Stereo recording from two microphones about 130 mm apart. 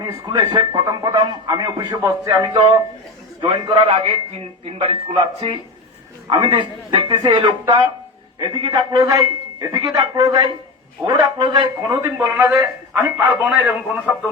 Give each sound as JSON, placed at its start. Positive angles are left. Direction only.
{"t": 0.0, "sound": "a man's voice", "side_deg": -30}
{"t": 6.2, "sound": "a man's voice", "side_deg": -35}
{"t": 11.8, "sound": "a man's voice", "side_deg": -20}